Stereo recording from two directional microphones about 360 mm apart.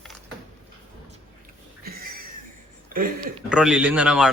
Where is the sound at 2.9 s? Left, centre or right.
Right.